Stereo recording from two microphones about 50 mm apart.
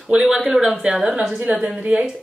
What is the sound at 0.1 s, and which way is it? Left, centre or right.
Speech, centre.